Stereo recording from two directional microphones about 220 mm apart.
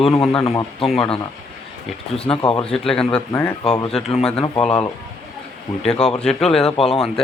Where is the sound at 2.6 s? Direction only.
5° left (ahead or behind).